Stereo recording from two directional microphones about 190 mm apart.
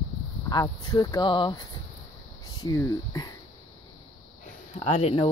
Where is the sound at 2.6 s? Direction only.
20° left (ahead or behind).